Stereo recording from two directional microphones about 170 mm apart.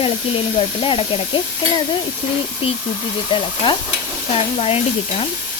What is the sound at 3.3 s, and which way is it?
Speech, 30° left (ahead or behind).